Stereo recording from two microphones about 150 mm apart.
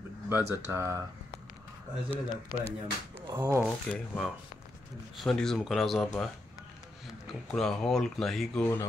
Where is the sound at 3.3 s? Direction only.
20° right (ahead or behind).